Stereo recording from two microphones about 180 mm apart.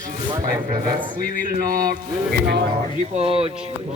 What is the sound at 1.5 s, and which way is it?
Music, 55° right (ahead or behind).